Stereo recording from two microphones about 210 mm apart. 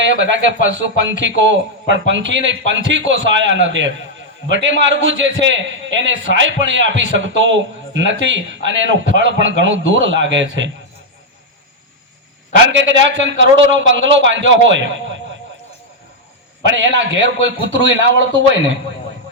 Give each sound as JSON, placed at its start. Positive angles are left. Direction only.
{"t": 0.0, "sound": "a man's voice", "side_deg": -60}
{"t": 12.8, "sound": "a man's voice", "side_deg": -60}
{"t": 16.7, "sound": "a man's voice", "side_deg": -60}